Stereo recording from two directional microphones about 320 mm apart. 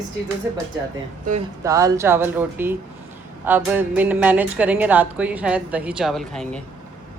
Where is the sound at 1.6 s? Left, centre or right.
Centre.